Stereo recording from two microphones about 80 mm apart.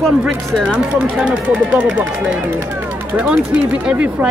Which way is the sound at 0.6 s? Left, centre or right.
Centre.